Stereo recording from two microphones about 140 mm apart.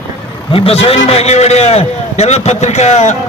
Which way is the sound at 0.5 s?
45° left (ahead or behind).